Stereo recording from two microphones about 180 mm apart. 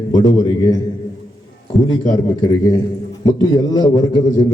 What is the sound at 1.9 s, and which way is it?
A man's voice, 25° left (ahead or behind).